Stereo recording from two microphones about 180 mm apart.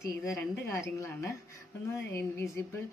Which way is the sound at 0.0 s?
15° left (ahead or behind).